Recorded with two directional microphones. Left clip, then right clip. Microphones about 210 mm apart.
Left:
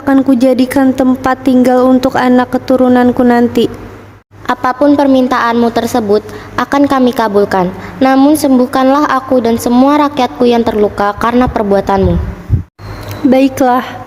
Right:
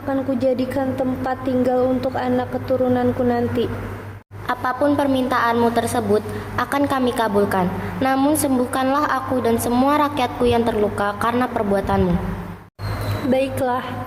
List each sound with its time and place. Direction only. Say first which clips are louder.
0.1 s a woman's voice: left 11 dB; 55° left (ahead or behind)
4.4 s a woman's voice: left 9 dB; 40° left (ahead or behind)
13.3 s a woman's voice: left 11 dB; 50° left (ahead or behind)